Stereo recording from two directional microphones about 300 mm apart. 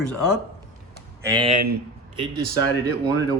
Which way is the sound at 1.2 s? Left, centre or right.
Centre.